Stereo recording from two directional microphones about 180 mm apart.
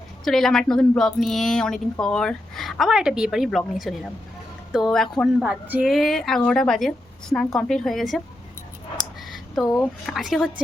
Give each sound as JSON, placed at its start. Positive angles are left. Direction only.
{"t": 0.3, "sound": "speech", "side_deg": 0}
{"t": 9.6, "sound": "speech", "side_deg": 20}
{"t": 10.1, "sound": "speech", "side_deg": 0}